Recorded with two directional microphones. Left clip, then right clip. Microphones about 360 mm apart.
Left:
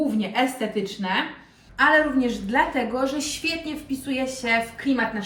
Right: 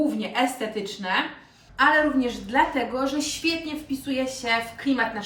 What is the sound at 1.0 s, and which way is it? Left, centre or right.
A woman's voice, centre.